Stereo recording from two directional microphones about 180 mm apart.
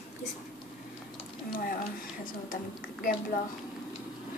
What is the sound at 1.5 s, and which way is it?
A woman's voice, 50° left (ahead or behind).